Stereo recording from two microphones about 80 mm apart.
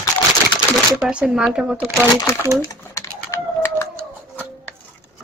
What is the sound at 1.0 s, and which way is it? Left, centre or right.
Speech, centre.